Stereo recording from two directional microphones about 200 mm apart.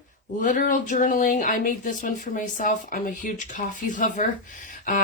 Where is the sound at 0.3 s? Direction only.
40° left (ahead or behind).